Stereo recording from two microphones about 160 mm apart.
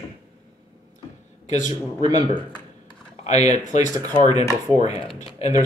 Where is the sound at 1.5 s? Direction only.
45° left (ahead or behind).